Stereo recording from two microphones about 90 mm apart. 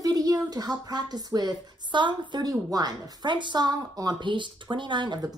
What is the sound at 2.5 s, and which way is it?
A woman's voice, 45° right (ahead or behind).